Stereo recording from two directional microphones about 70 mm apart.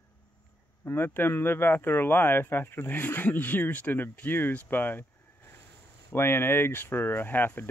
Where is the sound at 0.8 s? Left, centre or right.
Left.